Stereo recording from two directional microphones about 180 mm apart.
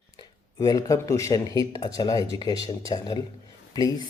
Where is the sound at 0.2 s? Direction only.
20° left (ahead or behind).